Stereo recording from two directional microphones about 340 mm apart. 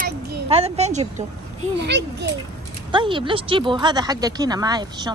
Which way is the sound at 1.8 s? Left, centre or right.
Right.